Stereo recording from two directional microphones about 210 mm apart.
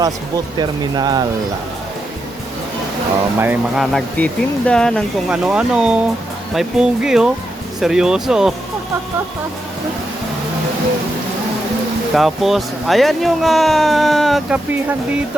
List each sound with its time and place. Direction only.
0.0 s speech: 20° right (ahead or behind)
3.3 s speech: 10° right (ahead or behind)
12.1 s speech: centre (ahead or behind)